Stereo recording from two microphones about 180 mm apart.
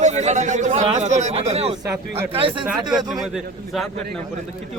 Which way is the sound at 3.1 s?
Centre (ahead or behind).